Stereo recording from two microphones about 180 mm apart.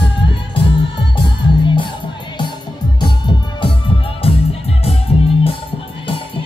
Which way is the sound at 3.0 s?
25° left (ahead or behind).